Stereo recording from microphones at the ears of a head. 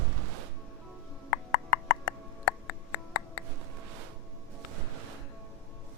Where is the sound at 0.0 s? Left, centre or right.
Right.